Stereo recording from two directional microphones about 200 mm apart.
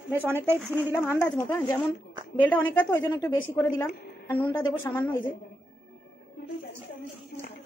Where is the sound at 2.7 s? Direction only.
5° left (ahead or behind).